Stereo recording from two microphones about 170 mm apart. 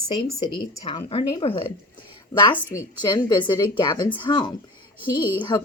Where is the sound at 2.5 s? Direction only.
20° left (ahead or behind).